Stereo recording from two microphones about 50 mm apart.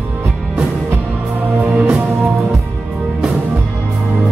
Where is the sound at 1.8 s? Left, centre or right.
Centre.